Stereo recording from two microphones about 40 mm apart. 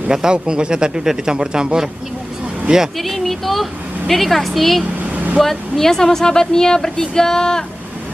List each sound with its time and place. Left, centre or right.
0.1 s speech: centre
3.0 s a woman's voice: centre
5.1 s vehicle: right
5.4 s speech: centre